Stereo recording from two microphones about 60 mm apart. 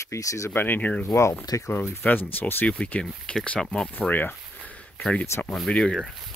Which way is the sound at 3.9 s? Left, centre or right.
Left.